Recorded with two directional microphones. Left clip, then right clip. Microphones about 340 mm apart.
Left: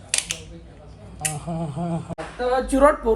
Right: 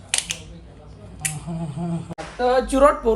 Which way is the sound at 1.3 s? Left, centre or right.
Left.